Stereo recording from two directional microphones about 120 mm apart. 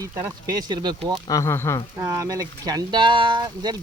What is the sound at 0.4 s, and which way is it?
Speech, 35° right (ahead or behind).